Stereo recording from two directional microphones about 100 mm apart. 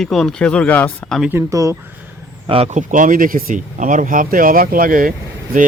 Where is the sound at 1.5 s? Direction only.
35° right (ahead or behind).